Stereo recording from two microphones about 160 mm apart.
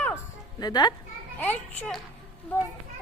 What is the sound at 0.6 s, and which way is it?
Speech, 25° left (ahead or behind).